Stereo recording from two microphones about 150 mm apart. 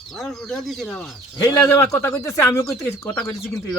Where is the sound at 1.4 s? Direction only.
15° left (ahead or behind).